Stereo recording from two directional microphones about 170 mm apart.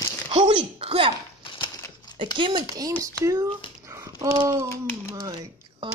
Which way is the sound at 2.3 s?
30° right (ahead or behind).